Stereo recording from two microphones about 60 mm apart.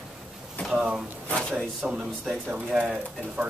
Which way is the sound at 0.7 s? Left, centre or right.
Centre.